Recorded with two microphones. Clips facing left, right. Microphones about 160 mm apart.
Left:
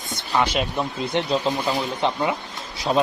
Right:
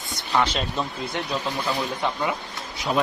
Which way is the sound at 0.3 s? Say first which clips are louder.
Left 2 dB; 15° left (ahead or behind).